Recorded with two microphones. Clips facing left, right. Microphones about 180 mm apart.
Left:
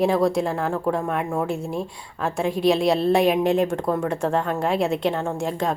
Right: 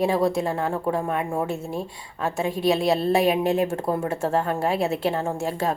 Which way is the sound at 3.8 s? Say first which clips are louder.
Left 2 dB; 30° right (ahead or behind).